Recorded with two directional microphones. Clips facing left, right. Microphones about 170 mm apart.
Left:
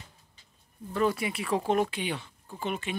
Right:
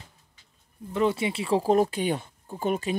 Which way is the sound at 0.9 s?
25° right (ahead or behind).